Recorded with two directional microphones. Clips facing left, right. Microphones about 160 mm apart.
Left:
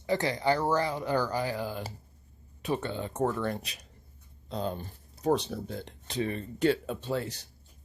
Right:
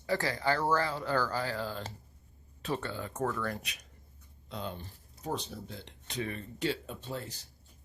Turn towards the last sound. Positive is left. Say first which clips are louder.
# left 8 dB
turn(degrees=85)